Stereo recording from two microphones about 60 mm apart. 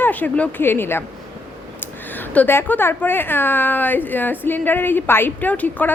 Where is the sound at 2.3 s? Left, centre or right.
Left.